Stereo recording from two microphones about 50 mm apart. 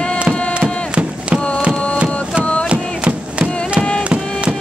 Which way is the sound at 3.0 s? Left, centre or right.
Right.